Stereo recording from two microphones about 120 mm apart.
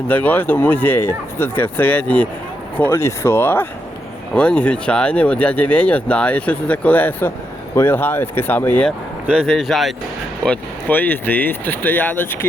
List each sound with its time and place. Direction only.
0.1 s speech: 15° left (ahead or behind)
9.2 s speech: 5° right (ahead or behind)
10.4 s speech: 10° left (ahead or behind)